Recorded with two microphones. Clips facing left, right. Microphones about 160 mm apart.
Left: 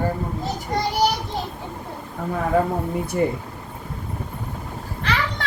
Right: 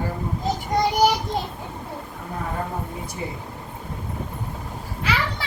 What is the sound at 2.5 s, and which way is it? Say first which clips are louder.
Speech: left 12 dB; 90° left.